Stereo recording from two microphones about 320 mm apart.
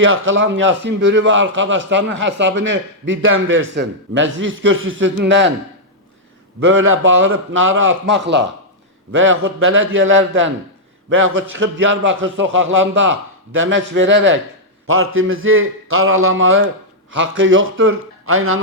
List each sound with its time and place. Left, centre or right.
0.0 s a man's voice: right
6.6 s a man's voice: right